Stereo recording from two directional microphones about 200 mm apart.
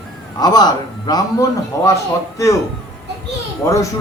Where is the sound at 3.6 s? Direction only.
15° left (ahead or behind).